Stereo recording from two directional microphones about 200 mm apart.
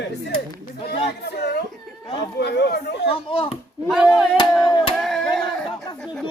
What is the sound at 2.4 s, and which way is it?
Speech, 55° left (ahead or behind).